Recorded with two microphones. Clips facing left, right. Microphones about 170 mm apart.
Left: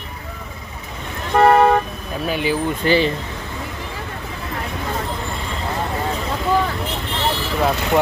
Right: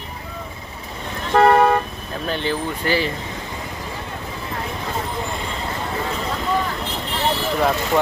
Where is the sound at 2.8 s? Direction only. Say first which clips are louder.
Left 5 dB; 20° left (ahead or behind).